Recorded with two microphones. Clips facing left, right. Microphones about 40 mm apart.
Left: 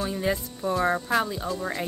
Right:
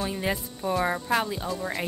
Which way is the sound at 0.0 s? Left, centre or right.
Centre.